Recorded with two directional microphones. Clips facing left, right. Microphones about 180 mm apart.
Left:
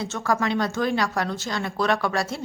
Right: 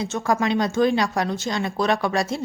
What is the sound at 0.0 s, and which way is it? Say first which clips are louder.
Speech: right 2 dB; 15° right (ahead or behind).